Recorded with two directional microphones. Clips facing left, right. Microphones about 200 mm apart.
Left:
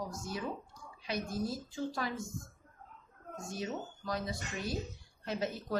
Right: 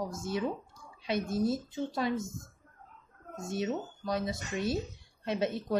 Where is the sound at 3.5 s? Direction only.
25° right (ahead or behind).